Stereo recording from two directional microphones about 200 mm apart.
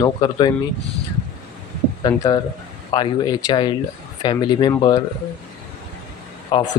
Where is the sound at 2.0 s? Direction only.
20° left (ahead or behind).